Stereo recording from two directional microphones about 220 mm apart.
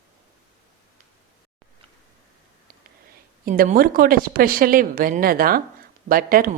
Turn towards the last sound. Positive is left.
turn(degrees=-40)  # may be behind; listen again after turning